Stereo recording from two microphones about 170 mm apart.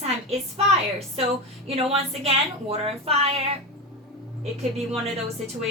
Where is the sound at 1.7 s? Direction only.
35° right (ahead or behind).